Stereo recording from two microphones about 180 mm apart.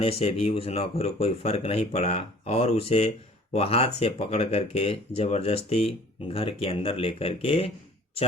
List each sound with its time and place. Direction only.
0.0 s speech: 35° left (ahead or behind)